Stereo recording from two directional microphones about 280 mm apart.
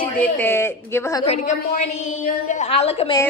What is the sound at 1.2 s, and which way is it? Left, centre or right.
A woman's voice, left.